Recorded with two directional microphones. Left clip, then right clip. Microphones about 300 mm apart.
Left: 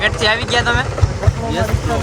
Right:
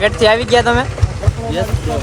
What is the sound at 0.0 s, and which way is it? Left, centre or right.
Speech, centre.